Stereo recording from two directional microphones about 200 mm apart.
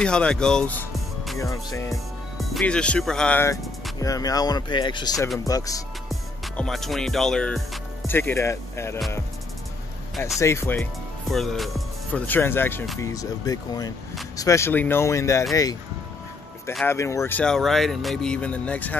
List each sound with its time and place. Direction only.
0.0 s speech: 5° left (ahead or behind)
1.4 s speech: 15° left (ahead or behind)
2.3 s speech: centre (ahead or behind)
4.0 s speech: 15° left (ahead or behind)
6.0 s music: centre (ahead or behind)
8.1 s speech: 10° left (ahead or behind)
10.4 s speech: 15° left (ahead or behind)
16.8 s speech: 15° left (ahead or behind)